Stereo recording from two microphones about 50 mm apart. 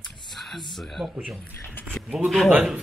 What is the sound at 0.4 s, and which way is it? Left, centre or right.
Speech, centre.